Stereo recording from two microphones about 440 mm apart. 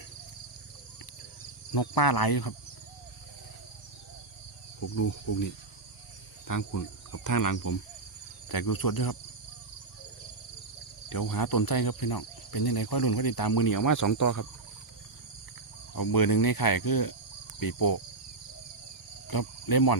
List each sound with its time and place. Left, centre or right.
1.7 s cricket: left
4.8 s speech: left
6.5 s cricket: left
11.1 s cricket: left
16.0 s cricket: left
19.3 s speech: left